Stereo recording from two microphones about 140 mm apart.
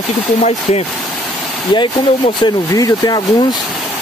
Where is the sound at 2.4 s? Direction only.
30° left (ahead or behind).